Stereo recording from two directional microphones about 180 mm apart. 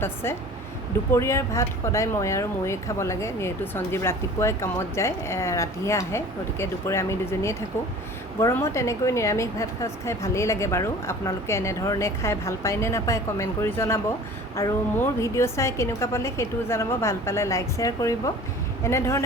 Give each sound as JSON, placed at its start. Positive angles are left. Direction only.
{"t": 0.0, "sound": "speech", "side_deg": 15}